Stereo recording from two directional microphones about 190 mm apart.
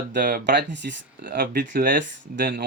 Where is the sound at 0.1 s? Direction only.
45° right (ahead or behind).